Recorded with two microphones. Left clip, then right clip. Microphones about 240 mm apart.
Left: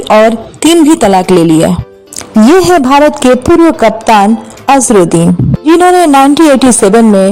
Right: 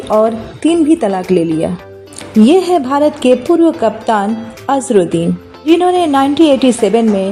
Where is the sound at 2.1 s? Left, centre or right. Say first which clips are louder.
Left 5 dB; left.